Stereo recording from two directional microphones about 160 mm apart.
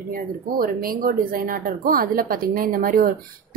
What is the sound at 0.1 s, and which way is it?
A woman's voice, 65° right (ahead or behind).